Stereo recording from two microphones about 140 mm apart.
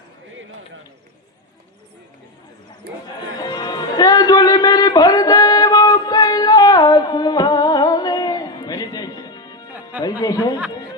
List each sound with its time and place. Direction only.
3.3 s music: 30° left (ahead or behind)
10.0 s speech: 30° left (ahead or behind)